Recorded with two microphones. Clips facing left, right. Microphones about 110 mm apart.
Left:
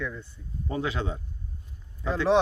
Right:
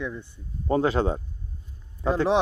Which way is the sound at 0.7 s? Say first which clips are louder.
Right 8 dB; 40° right (ahead or behind).